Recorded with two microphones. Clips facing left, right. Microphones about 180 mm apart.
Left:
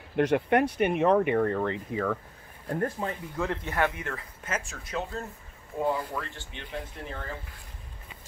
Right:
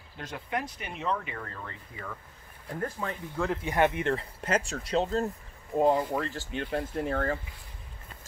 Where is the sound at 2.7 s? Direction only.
35° left (ahead or behind).